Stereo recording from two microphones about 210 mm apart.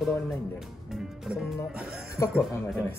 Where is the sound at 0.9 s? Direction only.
Centre (ahead or behind).